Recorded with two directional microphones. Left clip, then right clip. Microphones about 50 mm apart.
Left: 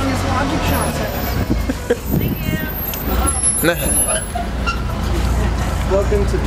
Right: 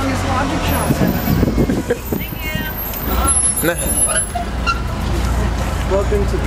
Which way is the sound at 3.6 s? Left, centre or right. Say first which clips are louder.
Left 2 dB; centre.